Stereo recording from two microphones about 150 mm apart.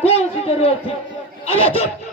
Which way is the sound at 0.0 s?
40° left (ahead or behind).